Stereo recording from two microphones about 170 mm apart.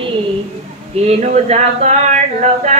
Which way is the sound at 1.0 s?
40° right (ahead or behind).